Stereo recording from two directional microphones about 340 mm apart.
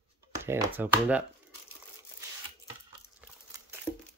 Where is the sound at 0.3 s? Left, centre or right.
Centre.